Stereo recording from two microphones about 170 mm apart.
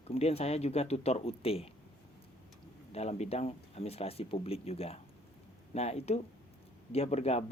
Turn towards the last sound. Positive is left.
turn(degrees=40)  # may be behind; listen again after turning